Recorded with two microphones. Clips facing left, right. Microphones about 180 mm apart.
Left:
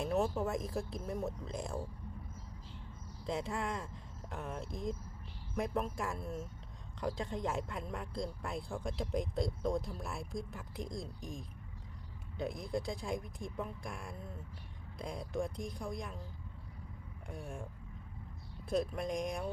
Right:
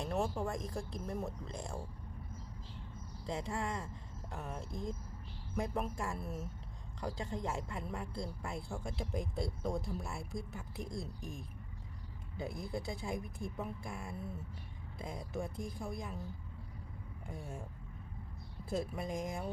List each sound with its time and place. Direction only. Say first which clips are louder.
0.0 s speech: left 3 dB; 5° left (ahead or behind)
3.2 s speech: left 2 dB; centre (ahead or behind)
17.2 s speech: left 1 dB; 5° right (ahead or behind)
18.7 s speech: left 3 dB; 5° right (ahead or behind)